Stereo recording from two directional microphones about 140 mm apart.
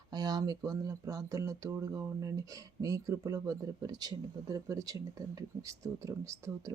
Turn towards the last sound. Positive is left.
turn(degrees=-20)  # may be behind; listen again after turning